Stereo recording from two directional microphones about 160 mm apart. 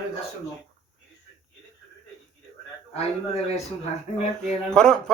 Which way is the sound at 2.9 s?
40° left (ahead or behind).